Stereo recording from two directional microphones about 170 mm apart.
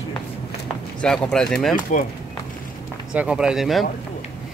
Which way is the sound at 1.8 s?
55° left (ahead or behind).